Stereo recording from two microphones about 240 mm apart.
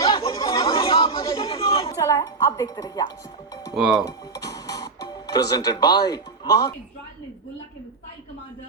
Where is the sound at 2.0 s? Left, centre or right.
Centre.